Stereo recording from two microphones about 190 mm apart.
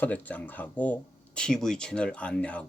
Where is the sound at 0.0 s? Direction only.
10° left (ahead or behind).